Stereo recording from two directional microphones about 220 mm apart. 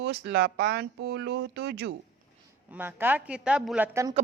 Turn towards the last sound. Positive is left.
turn(degrees=-15)  # may be behind; listen again after turning